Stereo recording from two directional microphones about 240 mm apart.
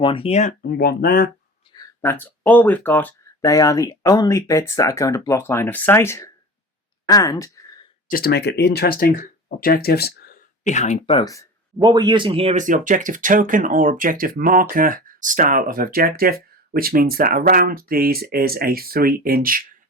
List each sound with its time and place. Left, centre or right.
0.0 s speech: left
2.0 s speech: centre
8.0 s speech: left; by 11.4 s centre
11.8 s speech: centre; by 19.6 s right